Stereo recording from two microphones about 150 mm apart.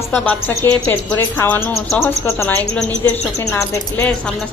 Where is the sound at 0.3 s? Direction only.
15° left (ahead or behind).